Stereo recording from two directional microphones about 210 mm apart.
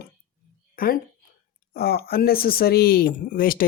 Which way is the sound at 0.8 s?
45° left (ahead or behind).